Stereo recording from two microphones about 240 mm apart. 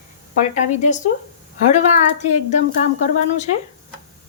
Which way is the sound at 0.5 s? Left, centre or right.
Left.